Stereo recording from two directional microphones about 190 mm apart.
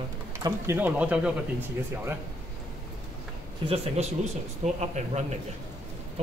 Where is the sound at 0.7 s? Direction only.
10° right (ahead or behind).